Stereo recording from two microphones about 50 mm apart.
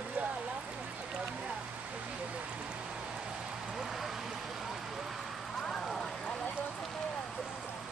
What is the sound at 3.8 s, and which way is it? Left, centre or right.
Vehicle, centre.